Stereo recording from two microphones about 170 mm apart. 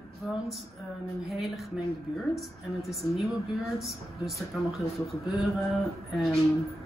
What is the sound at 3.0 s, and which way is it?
Speech, 25° left (ahead or behind).